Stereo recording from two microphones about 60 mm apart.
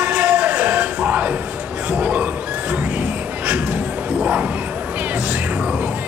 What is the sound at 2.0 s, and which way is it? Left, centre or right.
Neigh, right.